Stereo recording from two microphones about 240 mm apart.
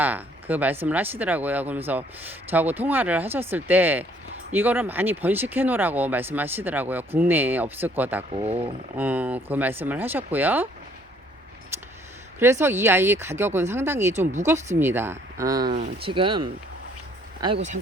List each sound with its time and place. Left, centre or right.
0.0 s speech: centre
8.3 s speech: right
9.0 s speech: centre
11.7 s a sound: centre
12.4 s speech: centre
15.7 s speech: right